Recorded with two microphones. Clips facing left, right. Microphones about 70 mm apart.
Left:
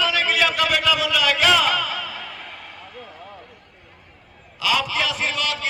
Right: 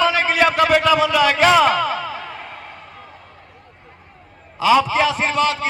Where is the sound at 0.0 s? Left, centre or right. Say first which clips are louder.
Right 5 dB; right.